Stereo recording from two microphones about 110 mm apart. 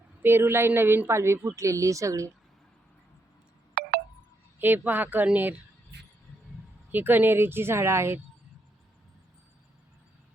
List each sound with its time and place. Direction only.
0.2 s a woman's voice: 20° right (ahead or behind)
4.6 s speech: 15° right (ahead or behind)
6.9 s a woman's voice: 15° right (ahead or behind)